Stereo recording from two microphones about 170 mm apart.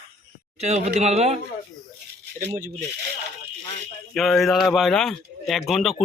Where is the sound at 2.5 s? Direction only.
55° right (ahead or behind).